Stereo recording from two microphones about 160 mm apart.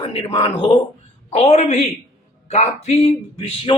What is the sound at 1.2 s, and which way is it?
Speech, 45° left (ahead or behind).